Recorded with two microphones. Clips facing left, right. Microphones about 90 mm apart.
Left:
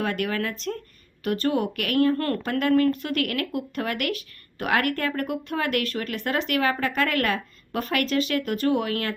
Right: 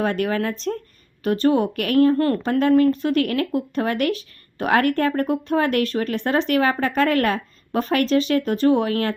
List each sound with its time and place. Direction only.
0.0 s speech: 30° right (ahead or behind)
2.1 s speech: 20° right (ahead or behind)